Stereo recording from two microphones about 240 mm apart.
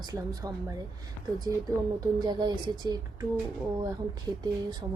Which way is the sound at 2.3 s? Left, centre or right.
Centre.